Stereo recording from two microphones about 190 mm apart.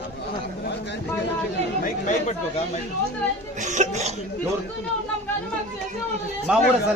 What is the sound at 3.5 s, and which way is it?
Cough, 40° right (ahead or behind).